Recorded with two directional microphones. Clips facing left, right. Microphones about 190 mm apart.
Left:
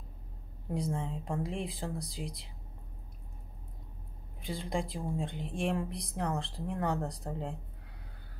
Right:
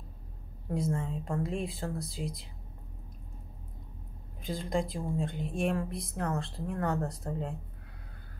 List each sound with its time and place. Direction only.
0.7 s speech: 15° left (ahead or behind)
4.6 s speech: 15° left (ahead or behind)